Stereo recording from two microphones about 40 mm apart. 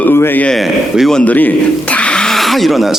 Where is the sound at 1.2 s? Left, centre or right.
Left.